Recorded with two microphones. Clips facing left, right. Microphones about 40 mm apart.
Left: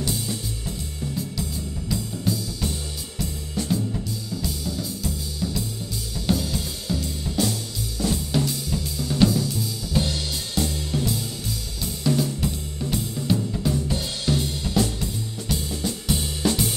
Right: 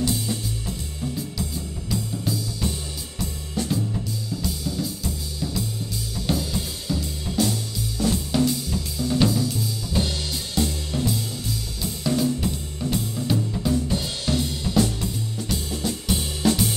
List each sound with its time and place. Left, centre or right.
0.0 s music: centre
1.9 s music: centre
6.2 s drum kit: centre
10.6 s music: centre
11.8 s drum kit: centre
14.7 s music: centre
15.7 s music: centre